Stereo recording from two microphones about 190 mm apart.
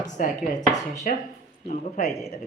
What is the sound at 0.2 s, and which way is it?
A woman's voice, 45° left (ahead or behind).